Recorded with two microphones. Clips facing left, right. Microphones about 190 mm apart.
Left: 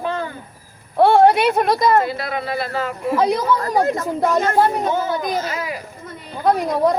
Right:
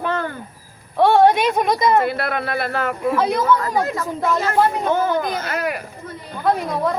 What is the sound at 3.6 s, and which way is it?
Speech, 40° left (ahead or behind).